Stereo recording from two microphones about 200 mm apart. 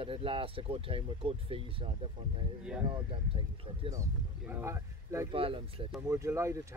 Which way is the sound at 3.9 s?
15° right (ahead or behind).